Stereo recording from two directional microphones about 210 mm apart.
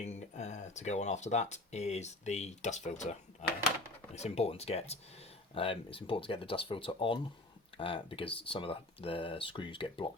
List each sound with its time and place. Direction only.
0.0 s speech: 30° left (ahead or behind)